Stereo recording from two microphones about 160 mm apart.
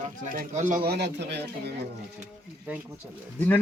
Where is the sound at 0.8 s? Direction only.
85° right.